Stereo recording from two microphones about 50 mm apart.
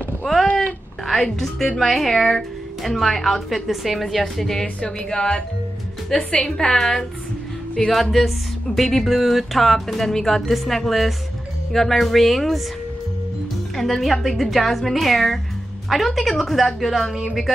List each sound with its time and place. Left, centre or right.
1.0 s a woman's voice: centre
13.7 s speech: centre